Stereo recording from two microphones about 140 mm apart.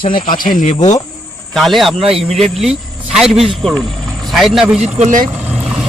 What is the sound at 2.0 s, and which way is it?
Speech, 45° right (ahead or behind).